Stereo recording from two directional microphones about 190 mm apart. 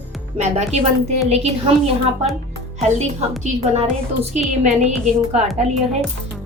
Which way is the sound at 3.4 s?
35° right (ahead or behind).